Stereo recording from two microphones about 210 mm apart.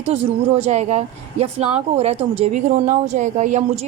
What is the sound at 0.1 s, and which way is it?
Speech, 30° right (ahead or behind).